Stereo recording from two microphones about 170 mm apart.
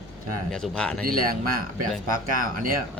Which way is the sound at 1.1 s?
60° right (ahead or behind).